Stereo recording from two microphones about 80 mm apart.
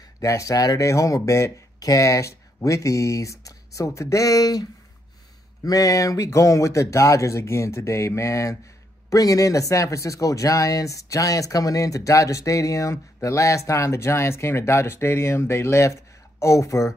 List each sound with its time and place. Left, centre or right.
0.2 s speech: left